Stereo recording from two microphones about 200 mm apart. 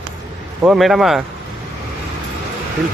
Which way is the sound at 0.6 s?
Centre (ahead or behind).